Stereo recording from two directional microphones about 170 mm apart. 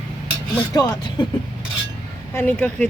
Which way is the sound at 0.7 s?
25° left (ahead or behind).